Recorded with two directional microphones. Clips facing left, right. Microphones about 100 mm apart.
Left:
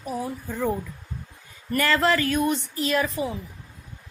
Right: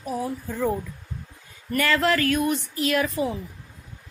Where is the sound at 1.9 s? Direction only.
25° left (ahead or behind).